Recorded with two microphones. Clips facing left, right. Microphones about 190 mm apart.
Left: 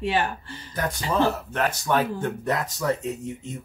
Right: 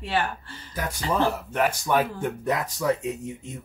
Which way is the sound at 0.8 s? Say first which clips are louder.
Left 1 dB; 10° right (ahead or behind).